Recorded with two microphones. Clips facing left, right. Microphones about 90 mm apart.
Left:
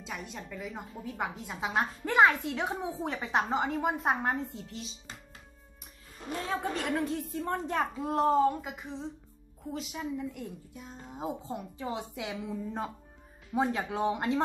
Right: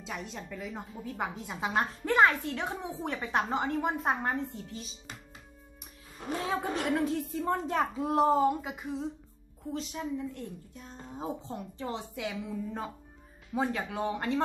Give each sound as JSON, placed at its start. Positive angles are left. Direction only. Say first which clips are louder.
{"t": 0.0, "sound": "a woman's voice", "louder": "right 1 dB", "side_deg": 0}
{"t": 6.7, "sound": "a woman's voice", "louder": "right 2 dB", "side_deg": 0}
{"t": 11.9, "sound": "a woman's voice", "louder": "even", "side_deg": 20}